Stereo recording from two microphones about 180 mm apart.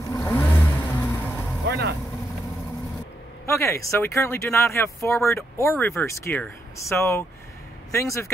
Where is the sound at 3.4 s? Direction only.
15° left (ahead or behind).